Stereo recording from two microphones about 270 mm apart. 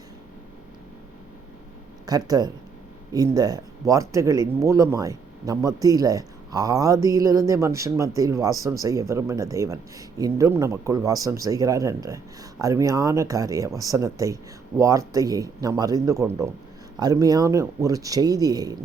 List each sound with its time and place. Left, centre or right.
2.0 s speech: centre